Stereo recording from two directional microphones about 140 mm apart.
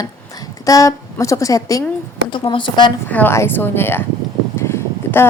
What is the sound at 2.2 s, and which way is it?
Speech, 35° left (ahead or behind).